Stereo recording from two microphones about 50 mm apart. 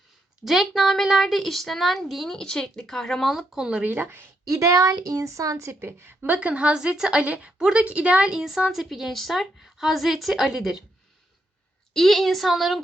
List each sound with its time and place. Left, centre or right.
0.4 s a woman's voice: centre
3.3 s a woman's voice: centre
3.8 s a woman's voice: right
4.4 s a woman's voice: right
6.2 s a woman's voice: right
6.7 s a woman's voice: centre
11.9 s a woman's voice: centre